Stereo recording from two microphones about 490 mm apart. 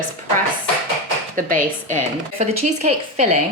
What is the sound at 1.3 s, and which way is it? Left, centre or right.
A woman's voice, centre.